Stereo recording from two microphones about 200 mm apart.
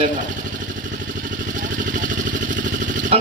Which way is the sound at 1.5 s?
40° right (ahead or behind).